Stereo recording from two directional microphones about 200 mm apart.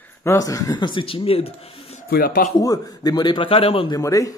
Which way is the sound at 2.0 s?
50° left (ahead or behind).